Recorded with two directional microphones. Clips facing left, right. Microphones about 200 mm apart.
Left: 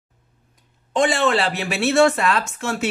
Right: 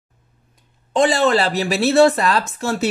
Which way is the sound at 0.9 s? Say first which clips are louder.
Right 3 dB; 40° right (ahead or behind).